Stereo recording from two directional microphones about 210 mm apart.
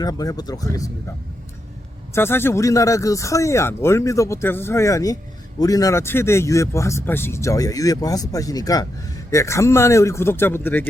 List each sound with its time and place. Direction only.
0.0 s speech: 20° left (ahead or behind)
2.1 s speech: 10° left (ahead or behind)